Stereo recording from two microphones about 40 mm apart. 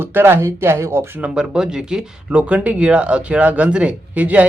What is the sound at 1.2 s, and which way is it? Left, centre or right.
Speech, right.